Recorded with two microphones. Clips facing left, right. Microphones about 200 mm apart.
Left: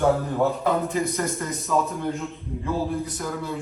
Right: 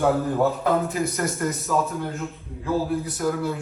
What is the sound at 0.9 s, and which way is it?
Speech, 5° right (ahead or behind).